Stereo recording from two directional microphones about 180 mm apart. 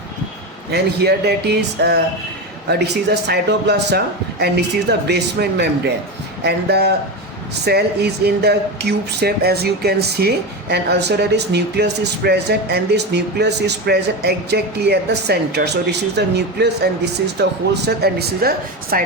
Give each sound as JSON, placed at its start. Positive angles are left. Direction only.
{"t": 0.7, "sound": "speech", "side_deg": -65}